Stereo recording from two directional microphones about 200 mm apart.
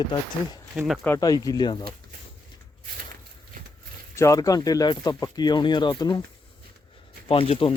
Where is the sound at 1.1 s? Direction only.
20° left (ahead or behind).